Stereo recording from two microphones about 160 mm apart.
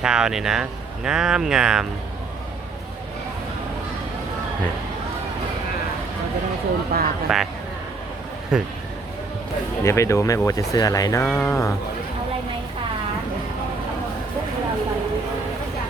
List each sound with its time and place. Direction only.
0.0 s speech: 5° right (ahead or behind)
6.9 s speech: 70° right (ahead or behind)
7.3 s speech: 5° right (ahead or behind)
8.5 s speech: 5° right (ahead or behind)
9.8 s speech: 20° left (ahead or behind)